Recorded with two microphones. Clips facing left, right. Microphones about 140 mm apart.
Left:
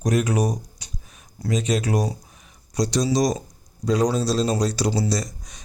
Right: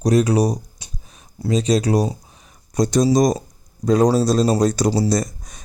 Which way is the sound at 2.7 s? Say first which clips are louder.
Right 5 dB; 50° right (ahead or behind).